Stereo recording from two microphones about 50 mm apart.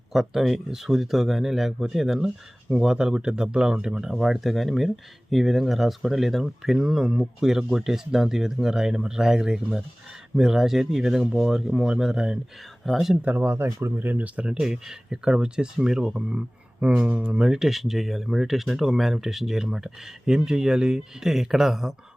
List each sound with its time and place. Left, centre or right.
0.1 s speech: centre
13.3 s speech: right
13.7 s speech: right
13.9 s speech: right
14.6 s speech: centre